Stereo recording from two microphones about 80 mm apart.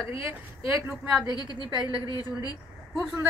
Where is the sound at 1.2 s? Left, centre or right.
Left.